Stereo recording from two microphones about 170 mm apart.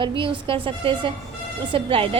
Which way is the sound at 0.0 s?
30° right (ahead or behind).